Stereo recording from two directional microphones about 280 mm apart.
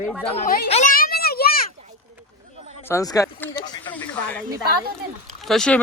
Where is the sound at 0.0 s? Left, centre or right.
Centre.